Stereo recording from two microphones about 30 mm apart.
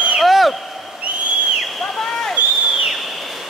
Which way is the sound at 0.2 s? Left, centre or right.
Centre.